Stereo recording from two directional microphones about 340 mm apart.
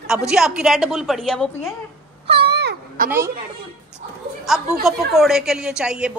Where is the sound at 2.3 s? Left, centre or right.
Right.